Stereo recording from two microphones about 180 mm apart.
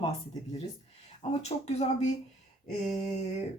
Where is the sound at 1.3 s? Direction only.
35° left (ahead or behind).